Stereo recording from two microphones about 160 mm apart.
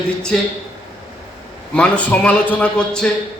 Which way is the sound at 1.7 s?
5° left (ahead or behind).